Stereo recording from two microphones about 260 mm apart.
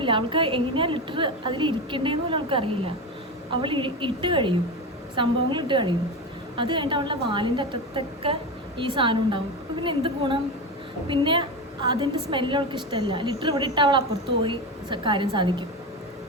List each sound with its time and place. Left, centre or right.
0.0 s a woman's voice: centre